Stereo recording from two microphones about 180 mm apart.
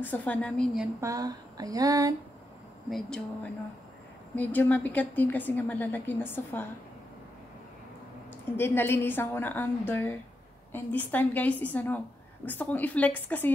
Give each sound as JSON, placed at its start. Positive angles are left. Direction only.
{"t": 0.0, "sound": "a woman's voice", "side_deg": 10}
{"t": 1.0, "sound": "speech", "side_deg": -20}
{"t": 2.9, "sound": "speech", "side_deg": 5}
{"t": 4.4, "sound": "a woman's voice", "side_deg": 10}
{"t": 8.5, "sound": "a woman's voice", "side_deg": 10}